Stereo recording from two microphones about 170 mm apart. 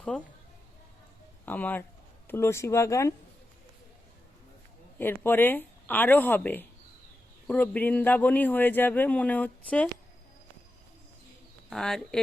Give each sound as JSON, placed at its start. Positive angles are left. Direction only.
{"t": 0.1, "sound": "speech", "side_deg": 5}
{"t": 1.5, "sound": "speech", "side_deg": 10}
{"t": 4.9, "sound": "speech", "side_deg": 10}
{"t": 11.7, "sound": "speech", "side_deg": 5}